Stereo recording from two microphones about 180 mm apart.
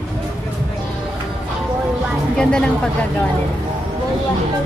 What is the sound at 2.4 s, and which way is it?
Speech, 5° left (ahead or behind).